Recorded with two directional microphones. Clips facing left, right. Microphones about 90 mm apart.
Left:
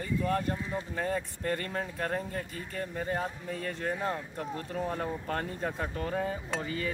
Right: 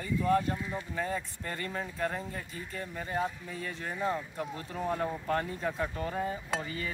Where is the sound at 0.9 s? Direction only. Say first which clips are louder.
Left 2 dB; 45° left (ahead or behind).